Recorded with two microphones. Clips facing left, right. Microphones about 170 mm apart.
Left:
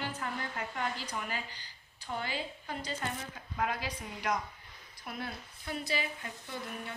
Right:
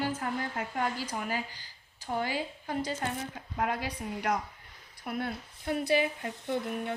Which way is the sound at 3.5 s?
55° right (ahead or behind).